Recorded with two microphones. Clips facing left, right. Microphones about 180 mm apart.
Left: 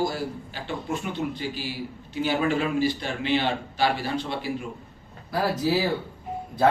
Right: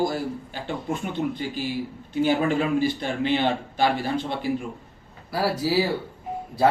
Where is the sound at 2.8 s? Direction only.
50° right (ahead or behind).